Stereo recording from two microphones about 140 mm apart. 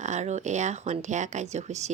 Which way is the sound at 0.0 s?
55° right (ahead or behind).